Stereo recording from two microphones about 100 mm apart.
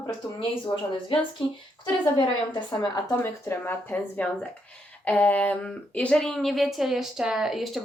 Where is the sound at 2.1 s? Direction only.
45° left (ahead or behind).